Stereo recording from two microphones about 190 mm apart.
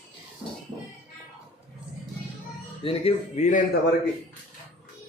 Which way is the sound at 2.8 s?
35° left (ahead or behind).